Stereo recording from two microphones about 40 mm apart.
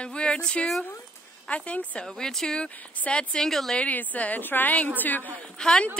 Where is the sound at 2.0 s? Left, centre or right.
Centre.